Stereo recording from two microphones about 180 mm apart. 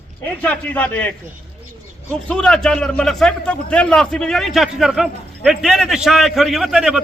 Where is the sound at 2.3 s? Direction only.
5° left (ahead or behind).